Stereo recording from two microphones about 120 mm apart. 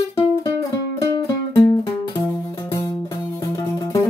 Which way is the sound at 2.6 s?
25° left (ahead or behind).